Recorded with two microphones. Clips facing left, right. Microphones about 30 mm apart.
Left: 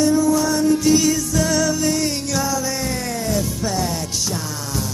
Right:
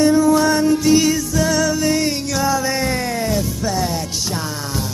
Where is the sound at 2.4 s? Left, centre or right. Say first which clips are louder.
Right 4 dB; right.